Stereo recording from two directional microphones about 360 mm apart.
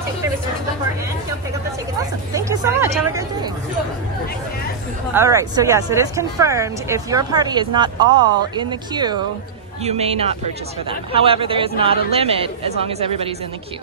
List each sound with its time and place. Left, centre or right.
2.4 s speech: centre
5.1 s speech: centre